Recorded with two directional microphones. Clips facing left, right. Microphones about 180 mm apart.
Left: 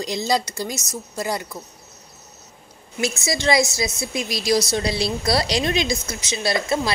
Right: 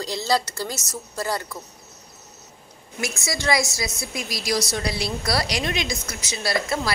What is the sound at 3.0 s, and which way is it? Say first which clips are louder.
A woman's voice: left 5 dB; 25° left (ahead or behind).